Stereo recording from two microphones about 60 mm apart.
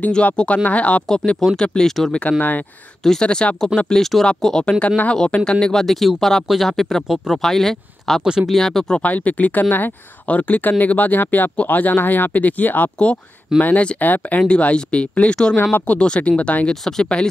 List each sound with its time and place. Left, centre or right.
0.1 s speech: centre
8.2 s speech: centre
8.5 s speech: centre
8.9 s speech: left
16.8 s speech: centre